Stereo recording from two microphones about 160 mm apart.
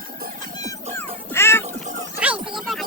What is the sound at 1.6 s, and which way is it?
Music, 50° right (ahead or behind).